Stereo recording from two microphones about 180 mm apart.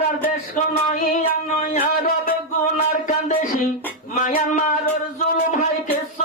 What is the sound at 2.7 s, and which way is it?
Music, 40° left (ahead or behind).